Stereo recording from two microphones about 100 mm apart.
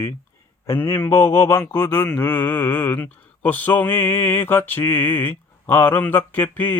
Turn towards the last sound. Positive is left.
turn(degrees=20)  # may be behind; listen again after turning